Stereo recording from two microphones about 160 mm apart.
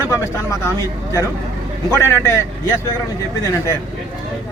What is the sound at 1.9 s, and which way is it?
Speech, 15° left (ahead or behind).